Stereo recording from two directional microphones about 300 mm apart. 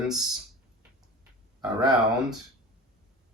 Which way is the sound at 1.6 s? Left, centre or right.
Centre.